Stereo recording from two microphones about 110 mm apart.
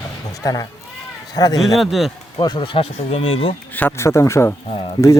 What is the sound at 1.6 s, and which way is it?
Speech, centre (ahead or behind).